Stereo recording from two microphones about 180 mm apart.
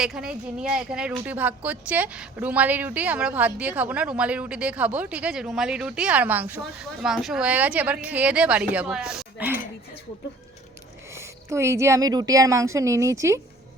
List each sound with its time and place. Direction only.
0.0 s speech: 5° right (ahead or behind)
11.1 s speech: 15° right (ahead or behind)